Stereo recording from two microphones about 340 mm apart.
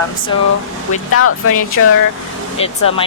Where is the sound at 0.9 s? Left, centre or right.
Left.